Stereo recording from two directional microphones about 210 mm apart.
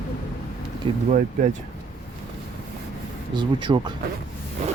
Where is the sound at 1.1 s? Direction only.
35° right (ahead or behind).